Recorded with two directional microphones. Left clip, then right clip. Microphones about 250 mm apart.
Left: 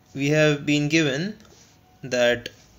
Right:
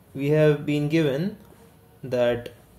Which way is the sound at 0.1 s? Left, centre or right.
Centre.